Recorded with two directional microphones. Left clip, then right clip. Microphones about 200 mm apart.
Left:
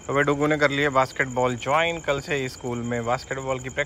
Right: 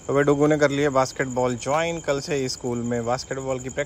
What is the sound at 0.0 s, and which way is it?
Speech, 20° right (ahead or behind).